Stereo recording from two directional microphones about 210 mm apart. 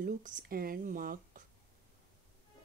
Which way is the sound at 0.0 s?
40° right (ahead or behind).